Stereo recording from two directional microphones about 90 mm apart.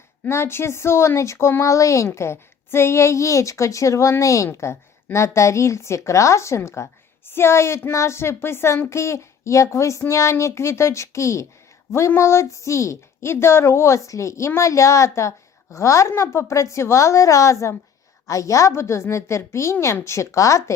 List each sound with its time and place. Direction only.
0.3 s a woman's voice: 30° left (ahead or behind)